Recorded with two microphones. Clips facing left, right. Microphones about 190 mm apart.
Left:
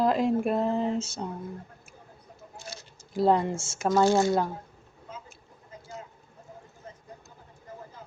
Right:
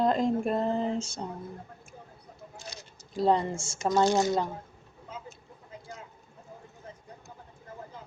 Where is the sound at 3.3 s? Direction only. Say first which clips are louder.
Even; 5° left (ahead or behind).